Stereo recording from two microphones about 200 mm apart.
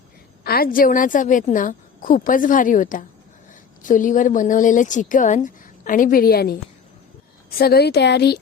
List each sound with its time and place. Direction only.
0.4 s a woman's voice: 50° left (ahead or behind)
7.6 s a woman's voice: 50° left (ahead or behind)